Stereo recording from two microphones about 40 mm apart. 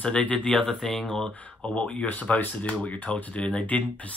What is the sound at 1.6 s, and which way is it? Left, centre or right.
Speech, left.